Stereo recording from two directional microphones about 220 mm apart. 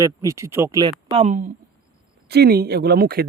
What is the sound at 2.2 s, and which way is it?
Speech, 45° right (ahead or behind).